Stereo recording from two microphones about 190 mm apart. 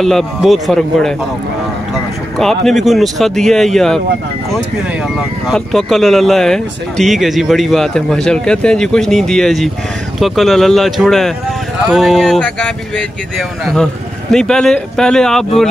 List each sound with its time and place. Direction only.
0.0 s speech: centre (ahead or behind)
2.3 s speech: centre (ahead or behind)
5.5 s speech: centre (ahead or behind)
14.3 s speech: 5° left (ahead or behind)